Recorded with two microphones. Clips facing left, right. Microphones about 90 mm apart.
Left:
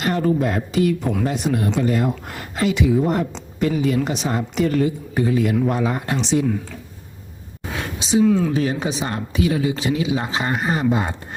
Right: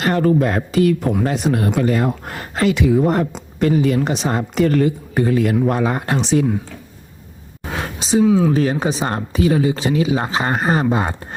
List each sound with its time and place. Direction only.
0.0 s a woman's voice: 60° right (ahead or behind)
1.2 s speech: 70° right (ahead or behind)
2.0 s a woman's voice: 50° right (ahead or behind)
4.0 s speech: 35° right (ahead or behind)
4.3 s a woman's voice: 50° right (ahead or behind)
7.8 s a sound: 40° right (ahead or behind)
8.2 s speech: 5° right (ahead or behind)
8.5 s speech: 40° right (ahead or behind)